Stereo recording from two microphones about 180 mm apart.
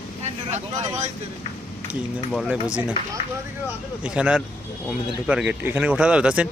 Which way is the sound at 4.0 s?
5° right (ahead or behind).